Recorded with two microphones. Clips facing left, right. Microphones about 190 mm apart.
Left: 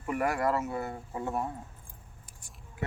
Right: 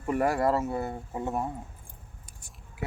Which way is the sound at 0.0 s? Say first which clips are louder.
Right 4 dB; 30° right (ahead or behind).